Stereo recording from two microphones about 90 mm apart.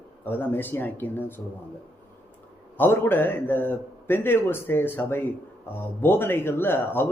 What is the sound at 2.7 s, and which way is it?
Speech, 25° left (ahead or behind).